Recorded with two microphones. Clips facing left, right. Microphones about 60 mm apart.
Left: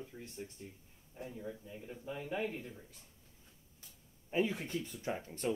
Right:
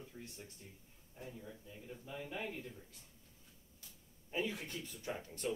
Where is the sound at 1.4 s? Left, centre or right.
Left.